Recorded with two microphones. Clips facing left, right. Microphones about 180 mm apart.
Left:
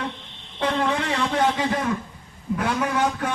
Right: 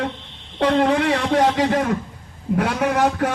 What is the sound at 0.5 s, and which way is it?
Speech, 65° right (ahead or behind).